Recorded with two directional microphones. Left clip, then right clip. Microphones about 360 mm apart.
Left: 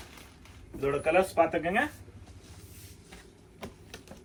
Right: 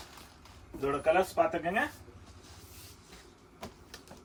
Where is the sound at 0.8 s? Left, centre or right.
Centre.